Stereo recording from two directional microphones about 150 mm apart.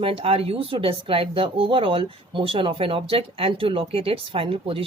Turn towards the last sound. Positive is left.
turn(degrees=-40)  # may be behind; listen again after turning